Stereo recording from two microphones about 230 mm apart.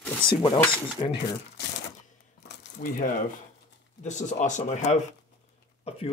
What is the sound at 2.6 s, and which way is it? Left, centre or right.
Speech, left.